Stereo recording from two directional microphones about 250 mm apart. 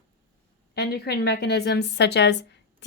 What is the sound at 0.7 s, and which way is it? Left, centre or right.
A woman's voice, left.